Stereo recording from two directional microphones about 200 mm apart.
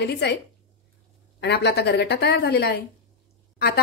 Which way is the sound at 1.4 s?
55° left (ahead or behind).